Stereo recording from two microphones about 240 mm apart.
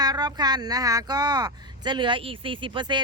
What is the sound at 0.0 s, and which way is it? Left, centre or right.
Speech, centre.